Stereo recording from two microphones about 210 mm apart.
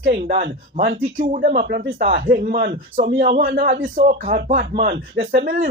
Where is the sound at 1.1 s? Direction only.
40° right (ahead or behind).